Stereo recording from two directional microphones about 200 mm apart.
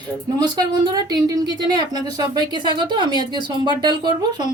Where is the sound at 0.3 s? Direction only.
20° right (ahead or behind).